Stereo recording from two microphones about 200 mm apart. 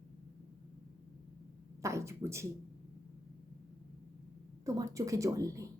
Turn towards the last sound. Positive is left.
turn(degrees=-15)  # may be behind; listen again after turning